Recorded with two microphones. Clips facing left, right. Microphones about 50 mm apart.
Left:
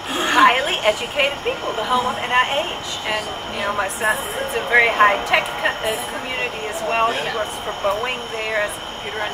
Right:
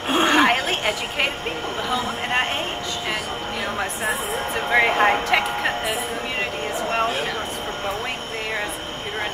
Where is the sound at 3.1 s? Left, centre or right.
Centre.